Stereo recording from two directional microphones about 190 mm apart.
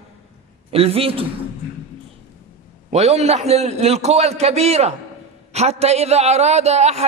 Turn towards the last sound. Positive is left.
turn(degrees=-35)  # may be behind; listen again after turning